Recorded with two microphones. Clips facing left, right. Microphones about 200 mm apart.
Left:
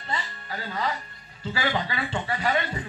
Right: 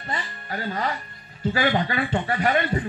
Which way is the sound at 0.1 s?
45° right (ahead or behind).